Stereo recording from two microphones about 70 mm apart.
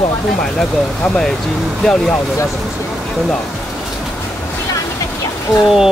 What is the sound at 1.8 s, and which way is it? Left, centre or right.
Speech, centre.